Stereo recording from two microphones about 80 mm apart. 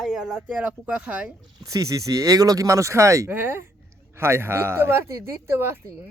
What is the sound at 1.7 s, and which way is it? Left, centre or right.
Speech, right.